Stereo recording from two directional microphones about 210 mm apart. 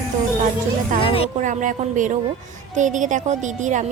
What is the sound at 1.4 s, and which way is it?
Speech, 35° right (ahead or behind).